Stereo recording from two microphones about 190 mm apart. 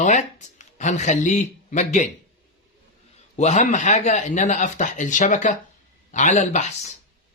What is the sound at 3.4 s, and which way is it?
Speech, 35° left (ahead or behind).